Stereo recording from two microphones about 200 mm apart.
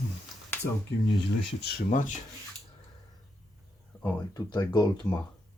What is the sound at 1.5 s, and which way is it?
Speech, 50° left (ahead or behind).